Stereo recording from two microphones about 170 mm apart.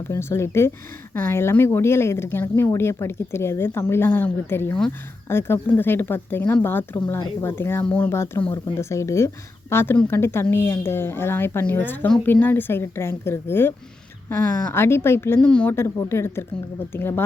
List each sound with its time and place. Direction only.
0.1 s speech: 15° left (ahead or behind)